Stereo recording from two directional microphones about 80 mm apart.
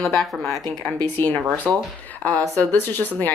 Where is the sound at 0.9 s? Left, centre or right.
Left.